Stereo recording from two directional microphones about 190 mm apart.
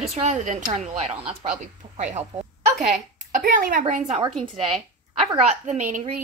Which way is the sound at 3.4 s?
45° right (ahead or behind).